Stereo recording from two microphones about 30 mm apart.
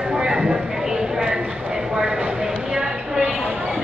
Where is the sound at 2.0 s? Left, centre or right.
Right.